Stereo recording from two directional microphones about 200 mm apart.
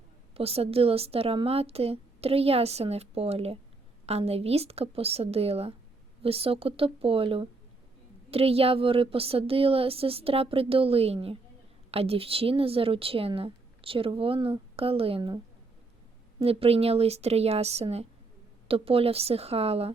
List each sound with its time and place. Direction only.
0.3 s a woman's voice: 30° right (ahead or behind)
16.4 s a woman's voice: 30° right (ahead or behind)